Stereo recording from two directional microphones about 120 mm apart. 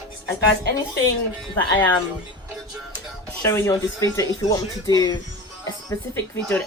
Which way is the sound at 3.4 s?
20° left (ahead or behind).